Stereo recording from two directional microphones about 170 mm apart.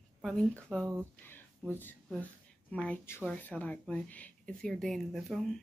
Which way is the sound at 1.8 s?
10° left (ahead or behind).